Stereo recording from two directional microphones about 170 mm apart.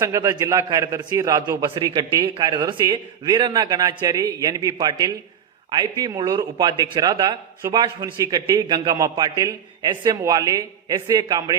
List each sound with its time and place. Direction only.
0.0 s a man's voice: 20° right (ahead or behind)